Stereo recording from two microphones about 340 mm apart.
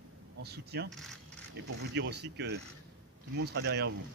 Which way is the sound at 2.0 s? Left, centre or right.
Right.